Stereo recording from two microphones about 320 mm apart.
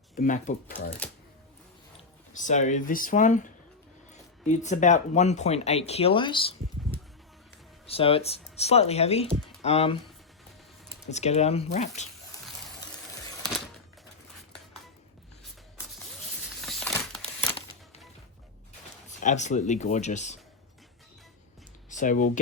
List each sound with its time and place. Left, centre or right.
0.2 s speech: left
2.3 s speech: left
7.9 s speech: centre
11.1 s speech: left
16.6 s a sound: centre
19.2 s speech: left
21.8 s computer keyboard: left